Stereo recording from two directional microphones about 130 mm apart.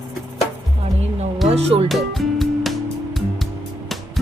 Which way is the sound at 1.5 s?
50° right (ahead or behind).